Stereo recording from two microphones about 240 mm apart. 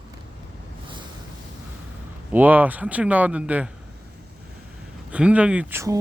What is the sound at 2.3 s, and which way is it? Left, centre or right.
Speech, centre.